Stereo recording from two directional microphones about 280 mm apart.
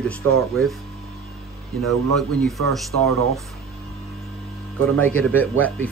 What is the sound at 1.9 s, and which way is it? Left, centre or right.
Speech, centre.